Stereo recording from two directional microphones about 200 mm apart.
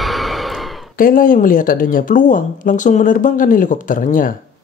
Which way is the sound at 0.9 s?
45° left (ahead or behind).